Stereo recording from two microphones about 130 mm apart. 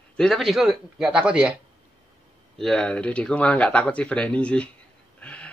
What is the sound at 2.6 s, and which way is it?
Speech, 5° left (ahead or behind).